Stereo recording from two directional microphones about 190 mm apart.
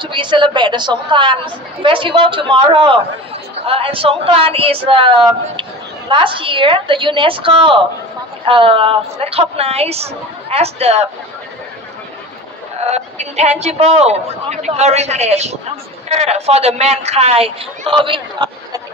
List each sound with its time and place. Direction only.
0.0 s a man's voice: 25° right (ahead or behind)
12.8 s speech: 35° right (ahead or behind)